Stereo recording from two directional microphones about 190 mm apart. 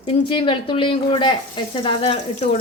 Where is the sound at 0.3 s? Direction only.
25° left (ahead or behind).